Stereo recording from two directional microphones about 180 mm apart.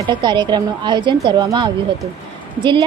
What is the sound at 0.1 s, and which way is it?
Speech, 25° right (ahead or behind).